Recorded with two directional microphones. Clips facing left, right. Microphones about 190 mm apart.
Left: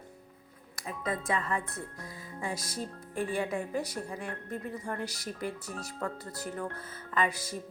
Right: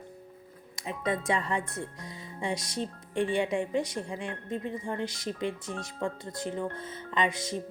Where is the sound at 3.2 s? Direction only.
25° right (ahead or behind).